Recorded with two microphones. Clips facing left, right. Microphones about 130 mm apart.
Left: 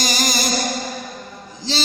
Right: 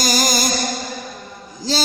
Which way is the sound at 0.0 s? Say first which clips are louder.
Right 3 dB; 40° right (ahead or behind).